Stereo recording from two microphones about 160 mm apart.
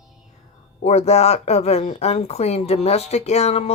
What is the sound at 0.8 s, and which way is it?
Speech, 40° left (ahead or behind).